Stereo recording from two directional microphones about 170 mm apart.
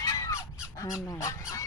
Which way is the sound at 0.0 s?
20° left (ahead or behind).